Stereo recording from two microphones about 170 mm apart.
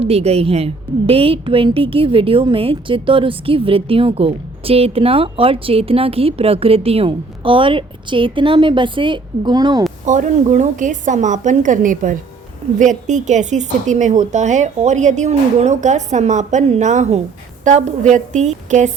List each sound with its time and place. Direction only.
0.0 s a woman's voice: 35° right (ahead or behind)
10.1 s a woman's voice: 45° right (ahead or behind)